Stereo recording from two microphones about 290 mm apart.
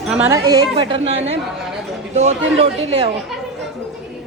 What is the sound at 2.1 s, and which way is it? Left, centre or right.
Speech, right.